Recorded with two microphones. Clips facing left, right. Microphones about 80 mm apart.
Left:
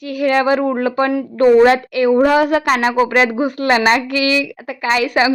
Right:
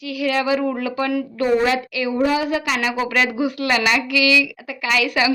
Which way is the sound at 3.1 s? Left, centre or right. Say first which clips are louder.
Left 5 dB; left.